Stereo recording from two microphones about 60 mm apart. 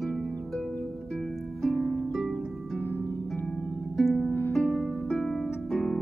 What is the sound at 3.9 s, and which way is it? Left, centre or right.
Harp, centre.